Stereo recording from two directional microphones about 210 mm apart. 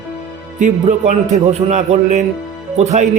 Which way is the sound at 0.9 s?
35° right (ahead or behind).